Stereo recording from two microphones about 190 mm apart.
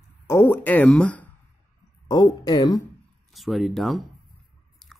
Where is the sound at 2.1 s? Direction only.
20° left (ahead or behind).